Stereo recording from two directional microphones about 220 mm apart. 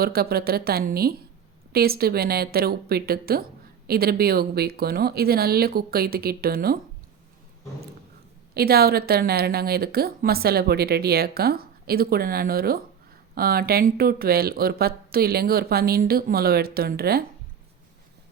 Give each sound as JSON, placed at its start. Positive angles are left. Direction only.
{"t": 0.0, "sound": "speech", "side_deg": -45}
{"t": 8.5, "sound": "speech", "side_deg": -45}